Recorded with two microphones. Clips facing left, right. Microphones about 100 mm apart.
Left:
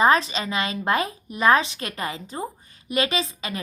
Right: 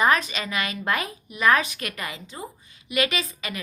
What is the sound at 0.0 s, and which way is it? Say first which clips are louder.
A woman's voice: left 3 dB; 30° left (ahead or behind).